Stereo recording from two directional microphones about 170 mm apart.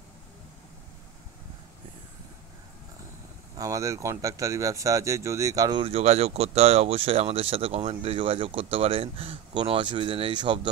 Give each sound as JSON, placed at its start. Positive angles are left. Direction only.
{"t": 3.5, "sound": "speech", "side_deg": -20}